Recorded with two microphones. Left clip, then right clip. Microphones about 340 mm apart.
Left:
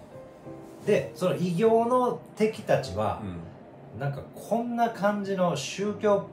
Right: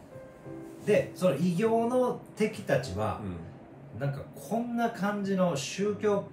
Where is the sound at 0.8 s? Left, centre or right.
Centre.